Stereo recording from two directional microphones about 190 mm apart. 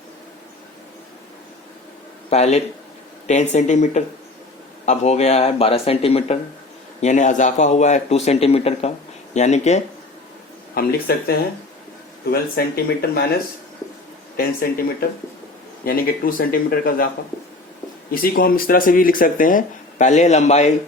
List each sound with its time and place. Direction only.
2.3 s a man's voice: 35° left (ahead or behind)
10.8 s speech: 55° left (ahead or behind)
15.8 s speech: 50° left (ahead or behind)
18.1 s speech: 50° left (ahead or behind)